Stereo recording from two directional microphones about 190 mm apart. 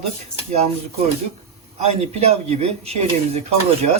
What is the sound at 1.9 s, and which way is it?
Speech, 35° right (ahead or behind).